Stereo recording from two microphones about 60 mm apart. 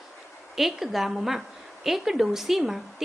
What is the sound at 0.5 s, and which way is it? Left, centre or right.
A woman's voice, centre.